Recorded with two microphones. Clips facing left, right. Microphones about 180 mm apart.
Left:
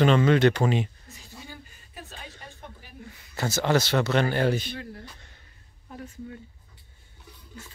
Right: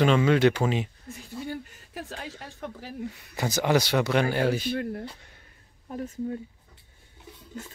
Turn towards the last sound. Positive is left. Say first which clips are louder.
# right 8 dB
turn(degrees=-40)  # may be behind; listen again after turning